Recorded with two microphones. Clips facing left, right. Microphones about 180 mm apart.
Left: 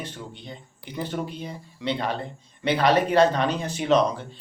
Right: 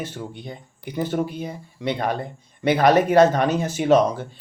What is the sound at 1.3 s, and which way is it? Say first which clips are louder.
Speech: right 4 dB; 10° right (ahead or behind).